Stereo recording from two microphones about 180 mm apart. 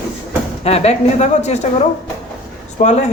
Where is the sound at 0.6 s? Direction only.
35° left (ahead or behind).